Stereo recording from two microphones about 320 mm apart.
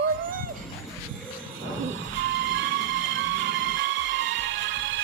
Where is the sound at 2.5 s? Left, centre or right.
Right.